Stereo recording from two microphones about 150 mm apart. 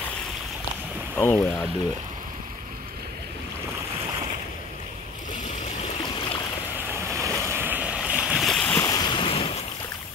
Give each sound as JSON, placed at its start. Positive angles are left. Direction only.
{"t": 1.1, "sound": "speech", "side_deg": 10}
{"t": 6.9, "sound": "boat", "side_deg": -15}
{"t": 8.5, "sound": "boat", "side_deg": 10}
{"t": 8.8, "sound": "waves", "side_deg": 25}